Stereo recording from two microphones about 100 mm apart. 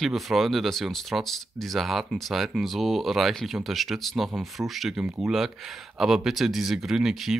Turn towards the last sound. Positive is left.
turn(degrees=-5)  # may be behind; listen again after turning